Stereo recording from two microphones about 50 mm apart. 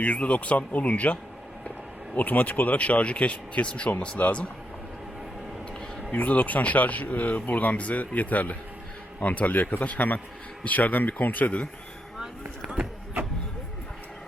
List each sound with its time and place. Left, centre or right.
0.0 s speech: left
6.1 s speech: left
12.6 s a sound: centre